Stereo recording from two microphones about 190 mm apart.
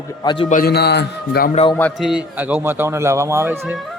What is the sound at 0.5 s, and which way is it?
A man's voice, 55° left (ahead or behind).